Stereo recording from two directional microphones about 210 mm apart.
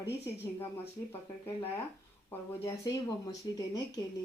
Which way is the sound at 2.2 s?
15° left (ahead or behind).